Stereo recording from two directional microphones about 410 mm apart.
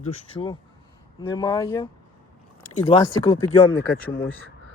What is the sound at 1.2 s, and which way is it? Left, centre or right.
Speech, centre.